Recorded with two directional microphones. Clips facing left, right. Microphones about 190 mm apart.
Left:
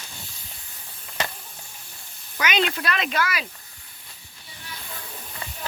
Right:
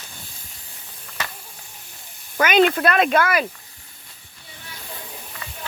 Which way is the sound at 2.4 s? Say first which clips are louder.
Right 8 dB; 50° right (ahead or behind).